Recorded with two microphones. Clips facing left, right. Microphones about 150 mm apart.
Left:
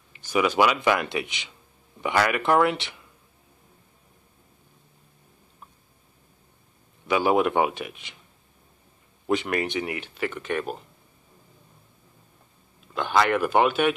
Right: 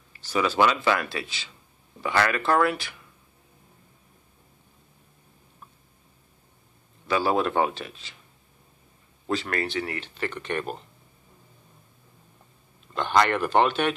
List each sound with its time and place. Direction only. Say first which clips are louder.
0.1 s speech: left 2 dB; 15° left (ahead or behind)
7.1 s speech: left 2 dB; 15° left (ahead or behind)
9.3 s speech: left 3 dB; 15° left (ahead or behind)
12.9 s speech: even; 5° left (ahead or behind)